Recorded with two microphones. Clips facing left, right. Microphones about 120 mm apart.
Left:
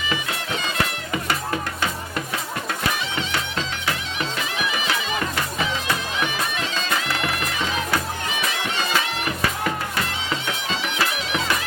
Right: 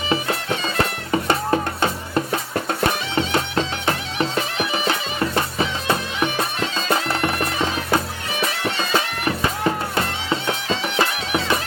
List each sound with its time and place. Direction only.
0.1 s music: 35° right (ahead or behind)
6.8 s bagpipes: 35° right (ahead or behind)